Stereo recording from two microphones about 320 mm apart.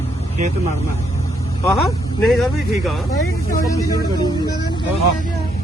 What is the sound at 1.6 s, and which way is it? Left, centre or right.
Speech, centre.